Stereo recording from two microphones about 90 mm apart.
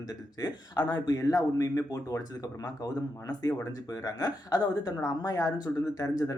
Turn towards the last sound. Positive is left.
turn(degrees=40)  # may be behind; listen again after turning